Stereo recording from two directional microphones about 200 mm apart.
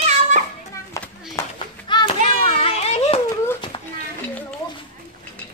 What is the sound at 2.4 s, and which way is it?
Children playing, 30° left (ahead or behind).